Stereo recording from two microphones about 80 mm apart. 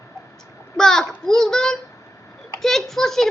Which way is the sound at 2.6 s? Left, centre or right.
Centre.